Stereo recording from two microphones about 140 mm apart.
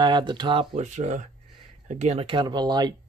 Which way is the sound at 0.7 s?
55° right (ahead or behind).